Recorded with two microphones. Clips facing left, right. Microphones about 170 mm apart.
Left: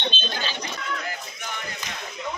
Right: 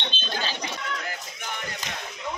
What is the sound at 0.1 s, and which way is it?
Chicken, 15° right (ahead or behind).